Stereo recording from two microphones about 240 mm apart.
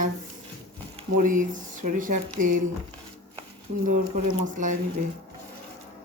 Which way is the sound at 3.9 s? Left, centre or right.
Right.